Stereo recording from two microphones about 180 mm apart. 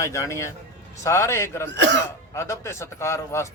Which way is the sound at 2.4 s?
15° left (ahead or behind).